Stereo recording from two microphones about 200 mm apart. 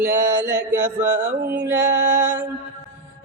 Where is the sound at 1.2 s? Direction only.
50° right (ahead or behind).